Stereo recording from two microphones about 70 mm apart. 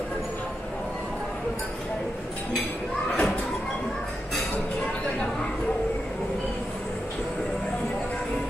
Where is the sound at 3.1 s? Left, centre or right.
Centre.